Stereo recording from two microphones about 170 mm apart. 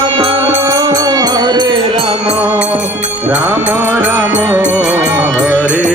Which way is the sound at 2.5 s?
10° right (ahead or behind).